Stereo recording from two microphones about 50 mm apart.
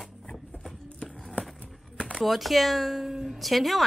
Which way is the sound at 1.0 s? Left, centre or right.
Centre.